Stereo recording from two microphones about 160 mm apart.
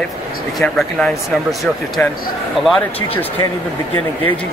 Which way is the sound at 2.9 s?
35° left (ahead or behind).